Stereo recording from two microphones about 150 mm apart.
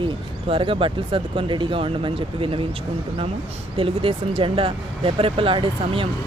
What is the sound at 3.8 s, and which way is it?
Speech, 35° right (ahead or behind).